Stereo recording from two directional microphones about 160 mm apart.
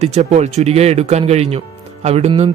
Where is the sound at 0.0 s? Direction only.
40° right (ahead or behind).